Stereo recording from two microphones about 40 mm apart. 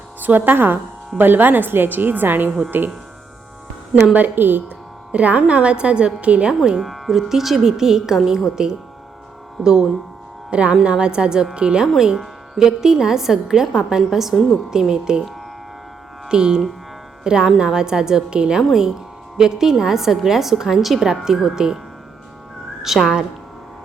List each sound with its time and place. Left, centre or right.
0.2 s a woman's voice: right
4.0 s speech: right
5.1 s a woman's voice: right
6.8 s speech: centre
9.6 s speech: centre
10.5 s speech: right
11.9 s speech: centre
16.3 s speech: centre
22.9 s speech: centre